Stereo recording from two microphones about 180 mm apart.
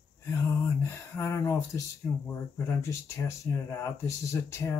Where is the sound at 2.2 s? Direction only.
15° left (ahead or behind).